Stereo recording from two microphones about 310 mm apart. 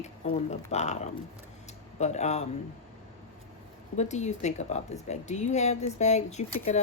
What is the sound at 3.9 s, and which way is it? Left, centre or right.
A woman's voice, left.